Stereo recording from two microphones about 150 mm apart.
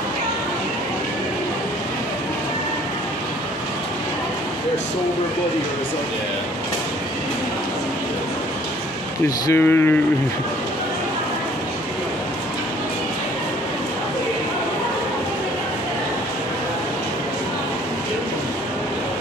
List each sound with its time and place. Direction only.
9.5 s speech: 15° left (ahead or behind)